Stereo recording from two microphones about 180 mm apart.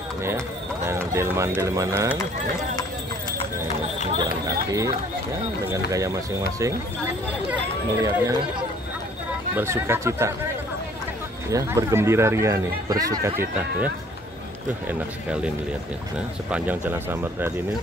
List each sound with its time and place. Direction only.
0.8 s speech: 15° right (ahead or behind)
4.2 s speech: 20° right (ahead or behind)
8.0 s speech: 25° right (ahead or behind)
11.5 s speech: 15° right (ahead or behind)
16.4 s speech: 10° right (ahead or behind)